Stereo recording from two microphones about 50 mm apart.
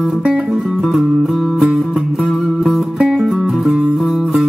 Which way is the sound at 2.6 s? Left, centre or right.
Centre.